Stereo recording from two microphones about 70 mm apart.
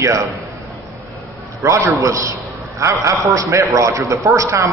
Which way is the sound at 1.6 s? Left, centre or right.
Right.